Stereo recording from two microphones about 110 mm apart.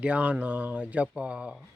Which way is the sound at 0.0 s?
10° right (ahead or behind).